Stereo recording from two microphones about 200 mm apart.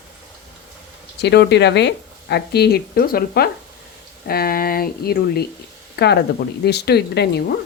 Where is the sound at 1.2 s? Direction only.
55° left (ahead or behind).